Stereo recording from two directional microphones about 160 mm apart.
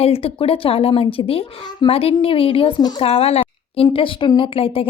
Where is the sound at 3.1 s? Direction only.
40° left (ahead or behind).